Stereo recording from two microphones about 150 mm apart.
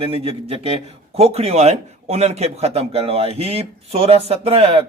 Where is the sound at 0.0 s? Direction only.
40° right (ahead or behind).